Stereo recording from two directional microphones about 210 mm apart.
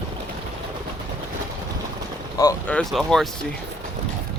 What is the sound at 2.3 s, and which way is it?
Speech, 15° left (ahead or behind).